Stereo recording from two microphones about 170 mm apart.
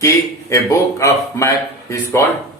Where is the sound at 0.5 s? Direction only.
15° left (ahead or behind).